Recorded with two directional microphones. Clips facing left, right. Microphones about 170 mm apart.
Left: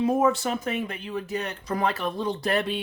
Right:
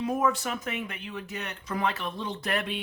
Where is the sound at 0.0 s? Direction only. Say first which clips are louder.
Left 5 dB; 30° left (ahead or behind).